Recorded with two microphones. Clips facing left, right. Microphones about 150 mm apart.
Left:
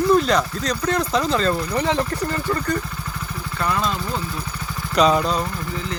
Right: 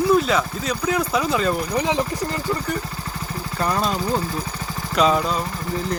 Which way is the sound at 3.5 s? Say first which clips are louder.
Right 1 dB; 35° right (ahead or behind).